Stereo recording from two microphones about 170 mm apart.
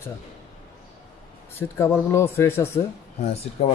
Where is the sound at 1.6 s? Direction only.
15° left (ahead or behind).